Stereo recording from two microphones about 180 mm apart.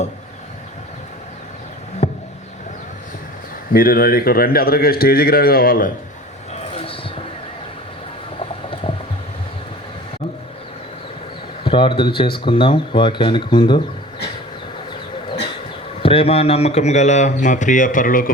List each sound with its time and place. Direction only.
2.0 s a sound: 40° left (ahead or behind)
3.7 s a man's voice: 55° left (ahead or behind)
6.5 s basketball bounce: 35° left (ahead or behind)
8.4 s a sound: 30° left (ahead or behind)
11.6 s speech: 30° left (ahead or behind)
16.0 s speech: 30° left (ahead or behind); by 18.3 s 50° left (ahead or behind)